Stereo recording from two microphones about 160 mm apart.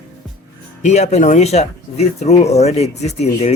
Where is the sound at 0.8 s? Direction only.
45° left (ahead or behind).